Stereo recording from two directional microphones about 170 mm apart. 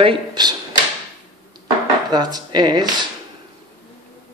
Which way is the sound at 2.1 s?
25° right (ahead or behind).